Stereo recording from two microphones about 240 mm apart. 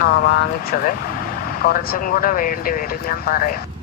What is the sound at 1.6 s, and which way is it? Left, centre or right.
Speech, left.